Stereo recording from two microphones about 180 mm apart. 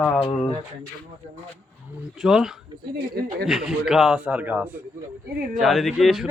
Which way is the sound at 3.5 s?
Centre (ahead or behind).